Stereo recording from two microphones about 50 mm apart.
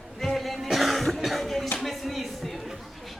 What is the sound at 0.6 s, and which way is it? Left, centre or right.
Cough, centre.